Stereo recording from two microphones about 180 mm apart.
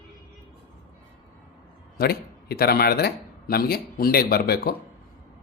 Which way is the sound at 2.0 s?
60° left (ahead or behind).